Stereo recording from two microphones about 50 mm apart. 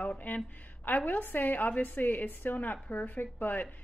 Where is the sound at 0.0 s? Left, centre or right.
Left.